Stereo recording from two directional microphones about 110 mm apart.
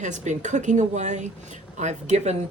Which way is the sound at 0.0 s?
90° right.